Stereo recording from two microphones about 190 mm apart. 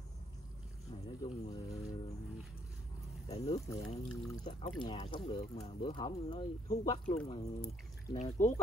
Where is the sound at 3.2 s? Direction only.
30° left (ahead or behind).